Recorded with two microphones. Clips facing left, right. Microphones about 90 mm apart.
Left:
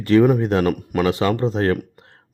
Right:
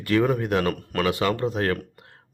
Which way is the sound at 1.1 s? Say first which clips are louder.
Left 3 dB; 25° left (ahead or behind).